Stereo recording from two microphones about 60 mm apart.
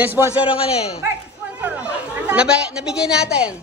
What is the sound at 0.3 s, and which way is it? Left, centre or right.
Speech, right.